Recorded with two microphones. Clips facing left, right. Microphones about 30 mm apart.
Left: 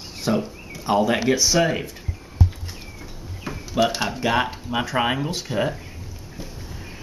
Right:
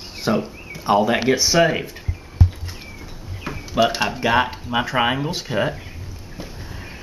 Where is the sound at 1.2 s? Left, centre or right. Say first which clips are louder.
Right 3 dB; centre.